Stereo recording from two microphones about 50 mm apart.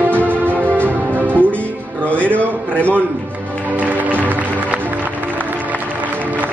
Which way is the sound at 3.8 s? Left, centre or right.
Right.